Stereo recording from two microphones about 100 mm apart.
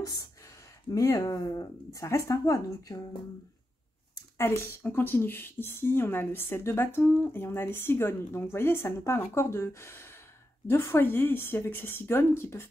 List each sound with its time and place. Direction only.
0.0 s speech: 40° left (ahead or behind)
4.4 s speech: 25° left (ahead or behind)